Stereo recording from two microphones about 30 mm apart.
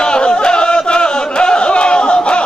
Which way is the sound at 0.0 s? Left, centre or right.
Left.